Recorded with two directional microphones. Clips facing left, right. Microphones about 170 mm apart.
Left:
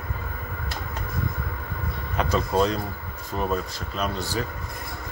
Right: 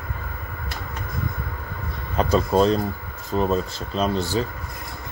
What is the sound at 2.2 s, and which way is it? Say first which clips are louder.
Speech: right 4 dB; 30° right (ahead or behind).